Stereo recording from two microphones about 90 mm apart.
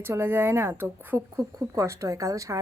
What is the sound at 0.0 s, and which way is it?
A woman's voice, 25° right (ahead or behind).